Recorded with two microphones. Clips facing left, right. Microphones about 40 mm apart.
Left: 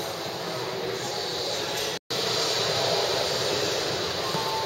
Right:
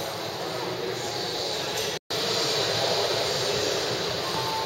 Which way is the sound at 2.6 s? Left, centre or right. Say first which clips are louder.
Even; centre.